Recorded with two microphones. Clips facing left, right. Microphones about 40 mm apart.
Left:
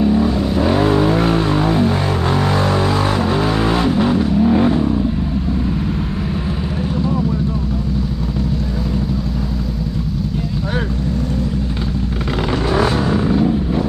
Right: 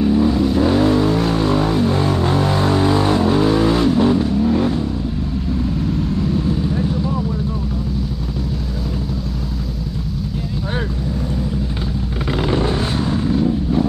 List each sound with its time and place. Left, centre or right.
0.0 s vehicle: centre
12.6 s vehicle: left
13.0 s vehicle: left